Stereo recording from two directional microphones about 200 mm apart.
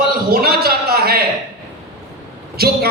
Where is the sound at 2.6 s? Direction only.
50° right (ahead or behind).